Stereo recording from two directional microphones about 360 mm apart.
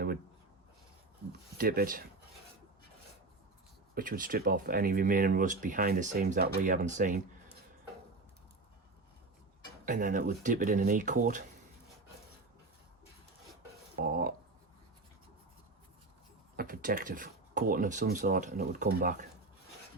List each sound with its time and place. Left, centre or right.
1.5 s speech: right
3.9 s speech: right
9.8 s speech: right
14.0 s speech: right
16.6 s speech: right